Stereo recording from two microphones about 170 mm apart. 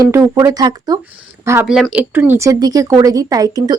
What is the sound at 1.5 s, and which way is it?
Speech, 10° right (ahead or behind).